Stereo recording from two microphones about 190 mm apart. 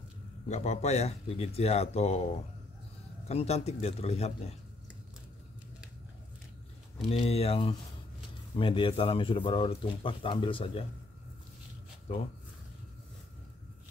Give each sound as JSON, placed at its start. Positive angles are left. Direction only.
{"t": 0.5, "sound": "speech", "side_deg": 35}
{"t": 7.1, "sound": "speech", "side_deg": 30}